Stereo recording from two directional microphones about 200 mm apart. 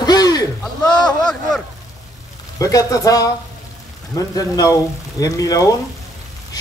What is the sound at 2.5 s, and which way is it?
A man's voice, 15° left (ahead or behind).